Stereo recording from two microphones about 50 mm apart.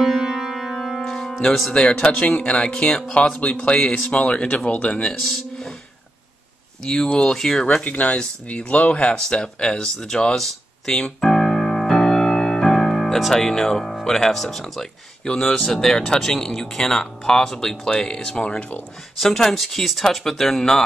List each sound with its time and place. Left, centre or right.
0.0 s music: centre
1.7 s speech: centre
3.2 s speech: left
6.8 s speech: centre
7.8 s speech: left
9.1 s a sound: centre
13.9 s speech: centre
15.2 s speech: centre
19.1 s speech: centre